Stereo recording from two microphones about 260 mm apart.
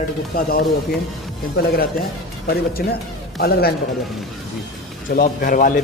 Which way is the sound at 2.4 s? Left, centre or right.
Left.